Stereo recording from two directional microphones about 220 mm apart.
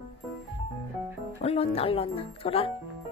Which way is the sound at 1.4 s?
25° left (ahead or behind).